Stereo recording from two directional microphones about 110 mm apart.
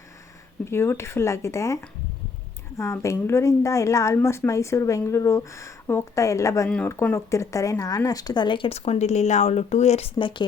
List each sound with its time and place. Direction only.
0.6 s a woman's voice: 25° left (ahead or behind); by 8.7 s 45° left (ahead or behind)
8.7 s speech: 70° left (ahead or behind)
10.2 s speech: 45° left (ahead or behind)